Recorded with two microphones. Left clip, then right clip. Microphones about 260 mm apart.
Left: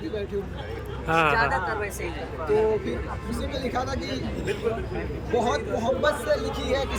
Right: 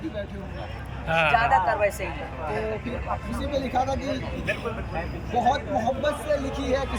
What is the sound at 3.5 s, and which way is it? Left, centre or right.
Speech, centre.